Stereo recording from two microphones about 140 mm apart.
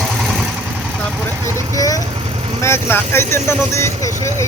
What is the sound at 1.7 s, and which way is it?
Speech, 25° left (ahead or behind).